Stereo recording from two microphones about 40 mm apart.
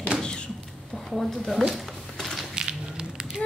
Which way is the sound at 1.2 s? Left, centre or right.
Centre.